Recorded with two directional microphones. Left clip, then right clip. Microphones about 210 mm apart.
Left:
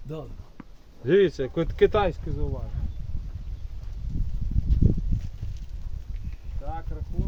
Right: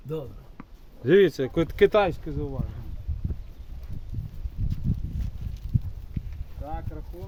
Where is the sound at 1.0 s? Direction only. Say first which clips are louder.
Right 2 dB; 60° right (ahead or behind).